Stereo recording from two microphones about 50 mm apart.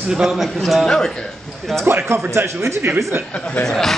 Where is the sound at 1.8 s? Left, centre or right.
Right.